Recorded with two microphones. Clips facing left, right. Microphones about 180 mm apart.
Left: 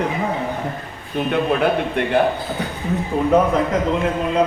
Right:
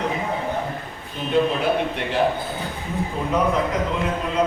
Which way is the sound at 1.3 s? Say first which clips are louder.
Left 1 dB; 60° left (ahead or behind).